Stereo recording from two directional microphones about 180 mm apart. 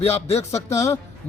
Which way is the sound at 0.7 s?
15° left (ahead or behind).